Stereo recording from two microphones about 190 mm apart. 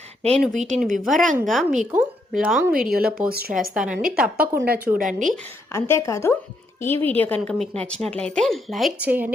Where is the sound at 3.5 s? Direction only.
5° right (ahead or behind).